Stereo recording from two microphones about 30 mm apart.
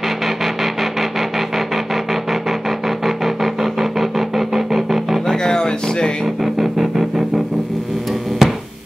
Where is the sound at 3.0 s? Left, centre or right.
Centre.